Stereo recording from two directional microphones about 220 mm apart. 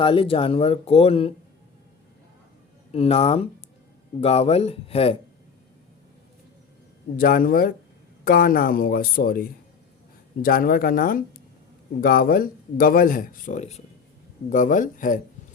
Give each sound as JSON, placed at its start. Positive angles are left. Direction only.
{"t": 0.0, "sound": "speech", "side_deg": 25}
{"t": 2.9, "sound": "speech", "side_deg": 25}
{"t": 7.2, "sound": "speech", "side_deg": 40}